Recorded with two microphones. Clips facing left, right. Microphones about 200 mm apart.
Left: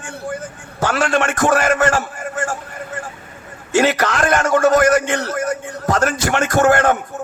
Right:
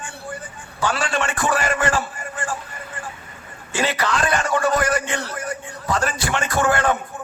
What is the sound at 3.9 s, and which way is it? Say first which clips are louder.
A man's voice: left 4 dB; 45° left (ahead or behind).